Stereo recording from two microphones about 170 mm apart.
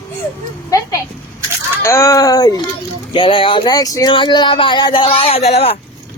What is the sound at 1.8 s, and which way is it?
Speech, 15° left (ahead or behind).